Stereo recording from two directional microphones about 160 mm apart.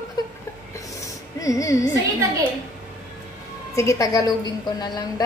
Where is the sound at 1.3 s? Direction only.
20° left (ahead or behind).